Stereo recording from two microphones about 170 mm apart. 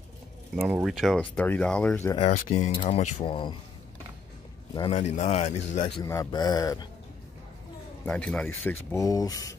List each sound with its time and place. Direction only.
0.6 s speech: 5° right (ahead or behind)
2.2 s speech: 45° left (ahead or behind); by 3.5 s 30° left (ahead or behind)
4.7 s speech: 35° left (ahead or behind)
6.0 s speech: 20° left (ahead or behind)
8.0 s speech: 5° left (ahead or behind)